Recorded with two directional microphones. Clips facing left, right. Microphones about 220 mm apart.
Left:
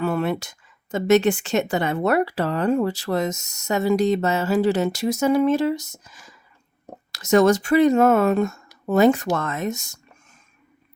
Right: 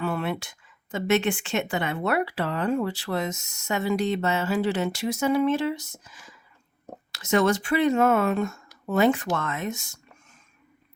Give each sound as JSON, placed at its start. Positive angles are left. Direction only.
{"t": 0.0, "sound": "a woman's voice", "side_deg": 45}